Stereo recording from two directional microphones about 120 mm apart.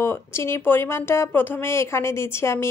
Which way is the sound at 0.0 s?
20° left (ahead or behind).